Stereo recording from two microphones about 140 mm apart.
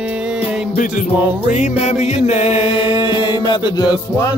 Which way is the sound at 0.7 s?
75° left (ahead or behind).